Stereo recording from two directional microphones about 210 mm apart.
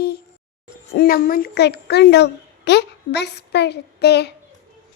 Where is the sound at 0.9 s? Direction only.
45° left (ahead or behind).